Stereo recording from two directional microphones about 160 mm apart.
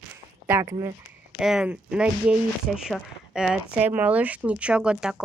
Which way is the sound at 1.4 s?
5° right (ahead or behind).